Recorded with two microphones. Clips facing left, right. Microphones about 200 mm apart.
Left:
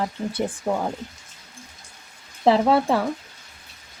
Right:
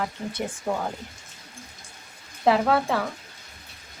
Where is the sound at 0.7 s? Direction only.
20° left (ahead or behind).